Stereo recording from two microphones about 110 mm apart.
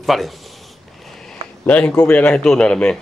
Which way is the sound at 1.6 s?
15° left (ahead or behind).